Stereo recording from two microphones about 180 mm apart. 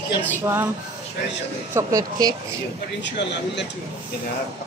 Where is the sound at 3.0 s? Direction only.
75° left (ahead or behind).